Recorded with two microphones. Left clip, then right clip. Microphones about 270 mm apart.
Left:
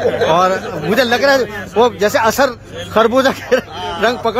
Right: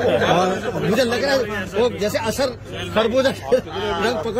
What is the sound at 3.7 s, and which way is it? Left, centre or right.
Speech, left.